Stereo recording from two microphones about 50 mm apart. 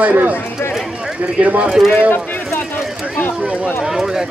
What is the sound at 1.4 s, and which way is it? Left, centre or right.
Speech, right.